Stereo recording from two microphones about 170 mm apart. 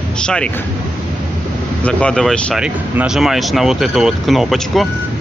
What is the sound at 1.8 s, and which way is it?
Speech, 5° left (ahead or behind).